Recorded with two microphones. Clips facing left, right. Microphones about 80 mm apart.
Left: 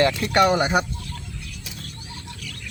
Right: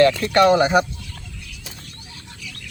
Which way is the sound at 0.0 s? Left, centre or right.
Centre.